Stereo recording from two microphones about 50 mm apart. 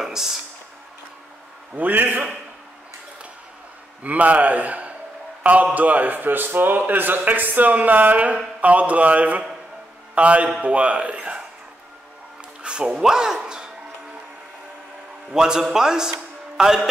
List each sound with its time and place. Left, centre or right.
0.0 s a sound: centre
1.8 s a man's voice: right
4.0 s a man's voice: right
12.6 s a man's voice: centre
15.3 s a man's voice: centre